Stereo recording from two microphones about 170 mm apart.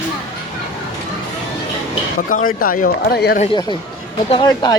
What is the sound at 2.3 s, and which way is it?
Speech, 55° left (ahead or behind).